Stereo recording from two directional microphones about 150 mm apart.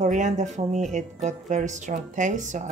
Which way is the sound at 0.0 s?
55° right (ahead or behind).